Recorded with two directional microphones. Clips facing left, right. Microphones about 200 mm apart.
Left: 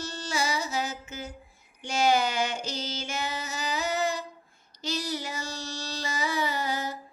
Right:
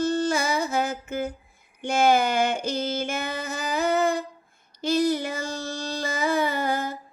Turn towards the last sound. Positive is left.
turn(degrees=-55)  # may be behind; listen again after turning